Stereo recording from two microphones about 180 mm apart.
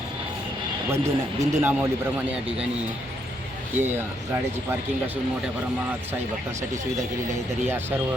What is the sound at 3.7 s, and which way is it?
Speech, 10° right (ahead or behind).